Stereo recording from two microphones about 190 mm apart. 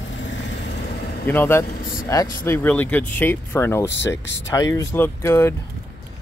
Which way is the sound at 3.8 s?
70° left (ahead or behind).